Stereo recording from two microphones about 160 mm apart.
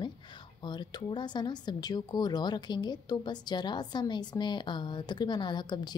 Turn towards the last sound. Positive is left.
turn(degrees=25)  # may be behind; listen again after turning